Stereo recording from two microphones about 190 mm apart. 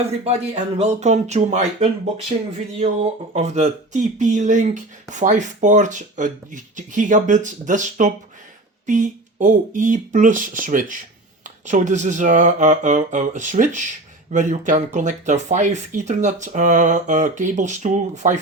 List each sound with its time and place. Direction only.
0.1 s speech: 35° right (ahead or behind)